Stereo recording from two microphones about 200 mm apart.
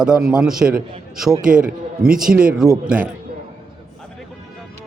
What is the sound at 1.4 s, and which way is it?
Speech, 45° right (ahead or behind).